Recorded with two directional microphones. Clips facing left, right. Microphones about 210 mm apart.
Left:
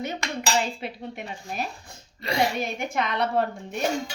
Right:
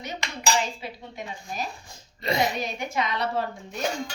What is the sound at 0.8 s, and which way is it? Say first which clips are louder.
Speech: left 3 dB; 60° left (ahead or behind).